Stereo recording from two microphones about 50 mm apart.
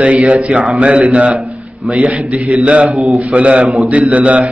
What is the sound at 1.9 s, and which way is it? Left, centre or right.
Speech, right.